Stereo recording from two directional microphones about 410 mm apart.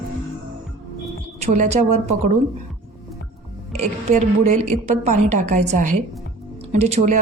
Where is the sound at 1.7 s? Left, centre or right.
Centre.